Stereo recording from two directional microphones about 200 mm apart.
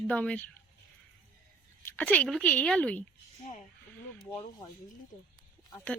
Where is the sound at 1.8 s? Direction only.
10° left (ahead or behind).